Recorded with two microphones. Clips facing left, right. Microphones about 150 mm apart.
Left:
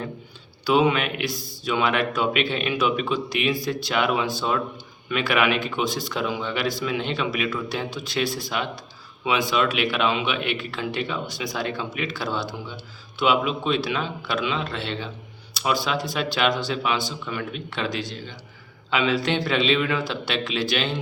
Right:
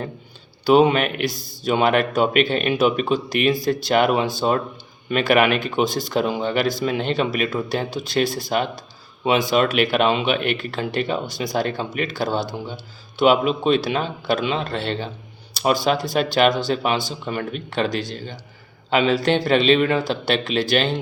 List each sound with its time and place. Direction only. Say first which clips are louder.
0.7 s speech: right 5 dB; 45° right (ahead or behind)
1.2 s speech: right 4 dB; centre (ahead or behind)
1.6 s speech: right 5 dB; 45° right (ahead or behind)